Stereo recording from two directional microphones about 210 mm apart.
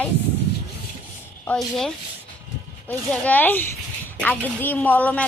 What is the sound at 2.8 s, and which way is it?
A woman's voice, 10° left (ahead or behind).